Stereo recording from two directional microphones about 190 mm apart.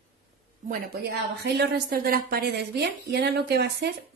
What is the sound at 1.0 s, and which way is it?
A woman's voice, 60° right (ahead or behind).